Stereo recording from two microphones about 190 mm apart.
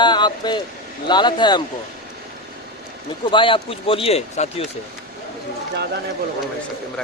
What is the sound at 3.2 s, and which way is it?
Speech, 25° left (ahead or behind).